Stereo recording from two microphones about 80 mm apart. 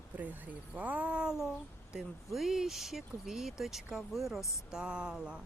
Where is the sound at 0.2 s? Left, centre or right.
Right.